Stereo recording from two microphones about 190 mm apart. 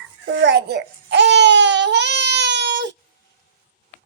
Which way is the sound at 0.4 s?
65° right (ahead or behind).